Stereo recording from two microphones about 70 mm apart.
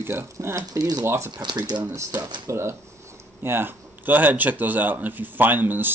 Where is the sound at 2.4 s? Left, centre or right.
Right.